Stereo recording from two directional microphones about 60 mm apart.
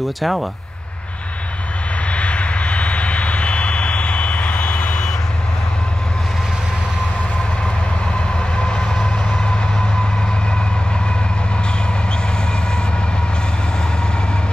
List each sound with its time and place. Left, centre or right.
0.2 s speech: centre
2.0 s vehicle: centre
8.4 s train: centre